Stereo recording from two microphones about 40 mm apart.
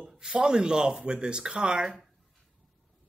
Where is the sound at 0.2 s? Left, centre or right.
Centre.